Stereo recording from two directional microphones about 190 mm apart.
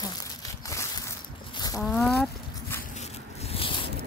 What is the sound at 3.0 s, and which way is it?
Scrape, 35° left (ahead or behind).